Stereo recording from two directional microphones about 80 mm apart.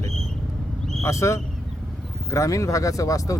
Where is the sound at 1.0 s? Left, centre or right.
Left.